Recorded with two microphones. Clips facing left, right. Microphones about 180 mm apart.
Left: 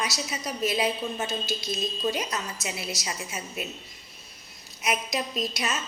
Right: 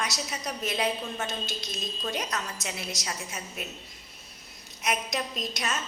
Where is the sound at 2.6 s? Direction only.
5° left (ahead or behind).